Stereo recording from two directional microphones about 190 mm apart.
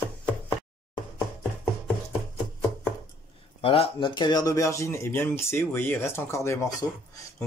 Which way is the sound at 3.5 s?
30° left (ahead or behind).